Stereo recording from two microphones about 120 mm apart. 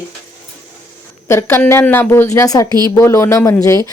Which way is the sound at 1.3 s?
20° left (ahead or behind).